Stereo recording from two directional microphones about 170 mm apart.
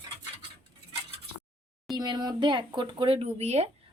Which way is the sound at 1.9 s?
25° right (ahead or behind).